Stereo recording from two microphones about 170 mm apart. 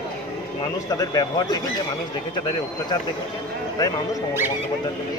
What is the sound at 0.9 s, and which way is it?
Speech, 25° left (ahead or behind).